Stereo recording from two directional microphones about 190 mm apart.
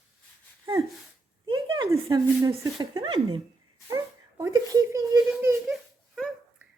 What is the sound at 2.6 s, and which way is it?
Speech, 20° right (ahead or behind).